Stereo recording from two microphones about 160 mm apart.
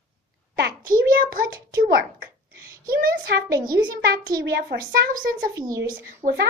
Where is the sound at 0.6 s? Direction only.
65° right (ahead or behind).